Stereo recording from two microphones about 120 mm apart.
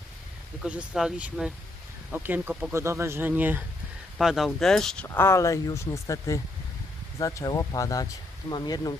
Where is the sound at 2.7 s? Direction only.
20° right (ahead or behind).